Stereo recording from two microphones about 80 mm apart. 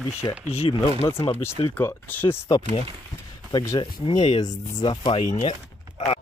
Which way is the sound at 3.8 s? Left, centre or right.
Left.